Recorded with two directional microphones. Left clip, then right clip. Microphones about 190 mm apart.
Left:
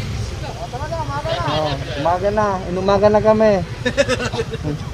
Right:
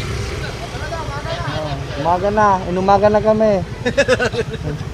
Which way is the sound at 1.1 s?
15° left (ahead or behind).